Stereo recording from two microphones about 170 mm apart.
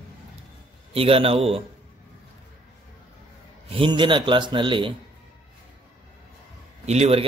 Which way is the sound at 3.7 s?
30° right (ahead or behind).